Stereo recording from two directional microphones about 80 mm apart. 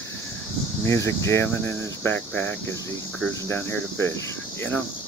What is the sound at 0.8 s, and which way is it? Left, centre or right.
Speech, left.